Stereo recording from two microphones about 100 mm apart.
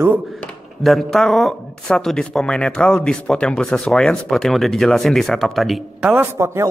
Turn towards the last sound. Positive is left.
turn(degrees=-25)  # may be behind; listen again after turning